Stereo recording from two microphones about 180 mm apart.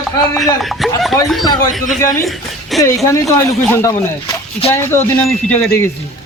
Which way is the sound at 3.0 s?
15° left (ahead or behind).